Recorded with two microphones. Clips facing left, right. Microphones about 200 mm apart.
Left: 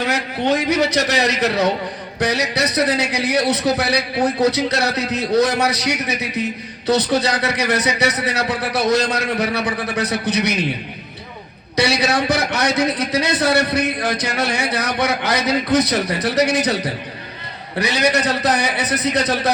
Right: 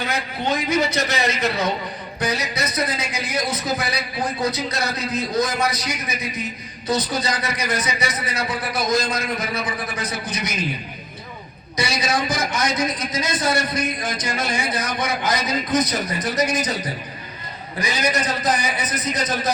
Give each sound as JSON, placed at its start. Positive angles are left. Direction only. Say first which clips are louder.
{"t": 0.0, "sound": "a man's voice", "louder": "left 5 dB", "side_deg": 70}
{"t": 11.8, "sound": "a man's voice", "louder": "left 5 dB", "side_deg": 70}